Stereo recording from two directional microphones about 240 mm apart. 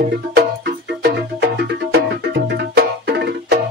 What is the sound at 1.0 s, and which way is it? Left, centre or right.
Music, right.